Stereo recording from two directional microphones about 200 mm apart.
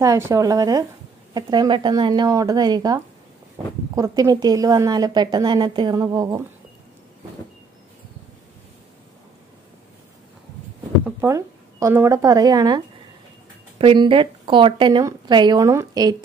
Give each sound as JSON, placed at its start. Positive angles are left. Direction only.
{"t": 0.0, "sound": "a woman's voice", "side_deg": -15}
{"t": 11.1, "sound": "a woman's voice", "side_deg": -10}